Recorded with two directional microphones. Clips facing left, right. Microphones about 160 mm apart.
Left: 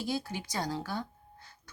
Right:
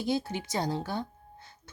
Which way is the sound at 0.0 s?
20° right (ahead or behind).